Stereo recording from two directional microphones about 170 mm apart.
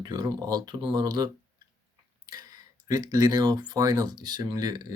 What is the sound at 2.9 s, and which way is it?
Speech, 20° right (ahead or behind).